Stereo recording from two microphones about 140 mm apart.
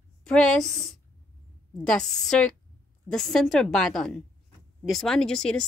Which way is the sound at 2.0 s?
5° left (ahead or behind).